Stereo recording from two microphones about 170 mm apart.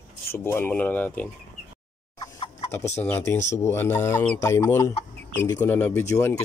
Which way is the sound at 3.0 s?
15° left (ahead or behind).